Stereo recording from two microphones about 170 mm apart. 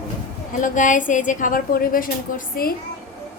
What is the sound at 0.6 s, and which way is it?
A woman's voice, 50° left (ahead or behind).